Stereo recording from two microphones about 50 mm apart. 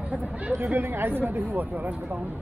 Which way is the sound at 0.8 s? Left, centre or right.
Right.